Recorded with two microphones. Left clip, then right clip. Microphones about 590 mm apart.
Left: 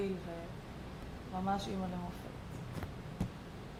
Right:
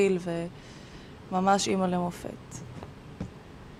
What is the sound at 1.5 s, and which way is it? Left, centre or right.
Speech, right.